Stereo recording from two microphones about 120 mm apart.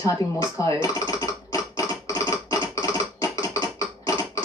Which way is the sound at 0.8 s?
25° left (ahead or behind).